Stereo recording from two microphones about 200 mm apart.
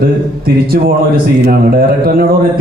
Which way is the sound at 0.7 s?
50° right (ahead or behind).